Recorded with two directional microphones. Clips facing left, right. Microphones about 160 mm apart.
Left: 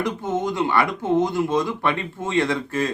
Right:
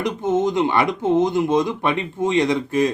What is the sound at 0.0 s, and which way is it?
A man's voice, 20° right (ahead or behind).